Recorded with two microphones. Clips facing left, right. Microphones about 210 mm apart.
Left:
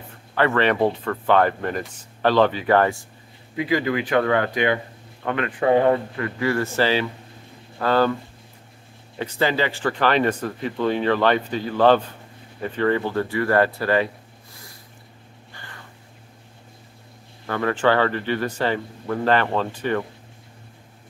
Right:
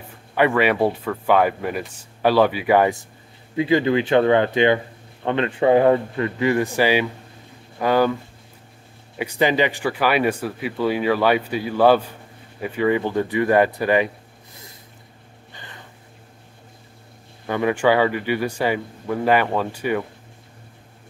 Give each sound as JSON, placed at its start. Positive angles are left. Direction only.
{"t": 0.3, "sound": "speech", "side_deg": -10}
{"t": 3.5, "sound": "speech", "side_deg": -25}
{"t": 9.2, "sound": "speech", "side_deg": -15}
{"t": 15.5, "sound": "a sound", "side_deg": -20}
{"t": 17.5, "sound": "speech", "side_deg": -15}